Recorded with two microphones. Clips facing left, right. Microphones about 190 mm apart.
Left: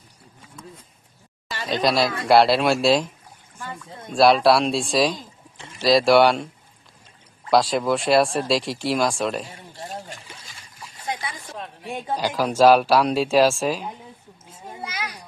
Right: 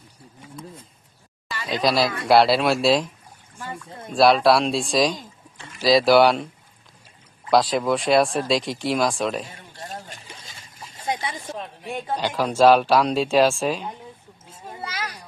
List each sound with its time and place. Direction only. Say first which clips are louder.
1.7 s speech: even; centre (ahead or behind)
7.5 s speech: even; centre (ahead or behind)
9.8 s a sound: left 2 dB; 20° left (ahead or behind)
10.8 s a sound: right 3 dB; 25° right (ahead or behind)
12.1 s speech: left 1 dB; 10° left (ahead or behind)
14.8 s children playing: right 1 dB; 10° left (ahead or behind)